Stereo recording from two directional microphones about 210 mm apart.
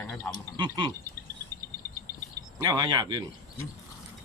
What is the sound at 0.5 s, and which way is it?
Speech, 20° right (ahead or behind).